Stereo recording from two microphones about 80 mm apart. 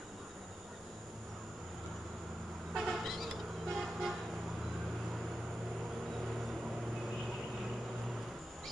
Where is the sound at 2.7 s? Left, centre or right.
Centre.